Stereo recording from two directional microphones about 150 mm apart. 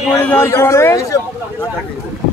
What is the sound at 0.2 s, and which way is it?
Speech, 15° left (ahead or behind).